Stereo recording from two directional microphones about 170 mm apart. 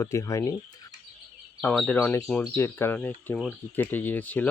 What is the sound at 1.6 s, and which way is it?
Speech, 5° left (ahead or behind).